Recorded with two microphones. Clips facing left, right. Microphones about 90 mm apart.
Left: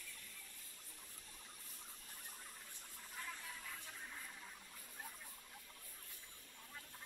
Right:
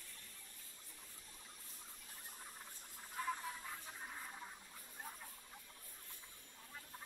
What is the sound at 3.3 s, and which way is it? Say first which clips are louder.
Music: right 10 dB; 30° right (ahead or behind).